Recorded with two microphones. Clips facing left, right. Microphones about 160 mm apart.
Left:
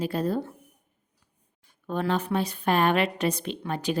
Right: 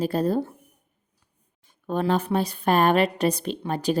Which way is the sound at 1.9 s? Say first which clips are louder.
Right 3 dB; 40° right (ahead or behind).